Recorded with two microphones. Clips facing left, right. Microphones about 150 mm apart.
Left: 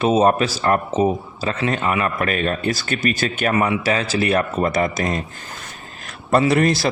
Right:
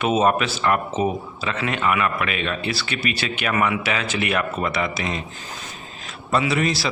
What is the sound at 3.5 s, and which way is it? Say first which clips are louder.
A man's voice: left 2 dB; 35° left (ahead or behind).